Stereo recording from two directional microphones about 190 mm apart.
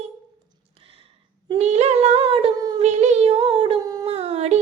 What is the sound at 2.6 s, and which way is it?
Child singing, 20° right (ahead or behind).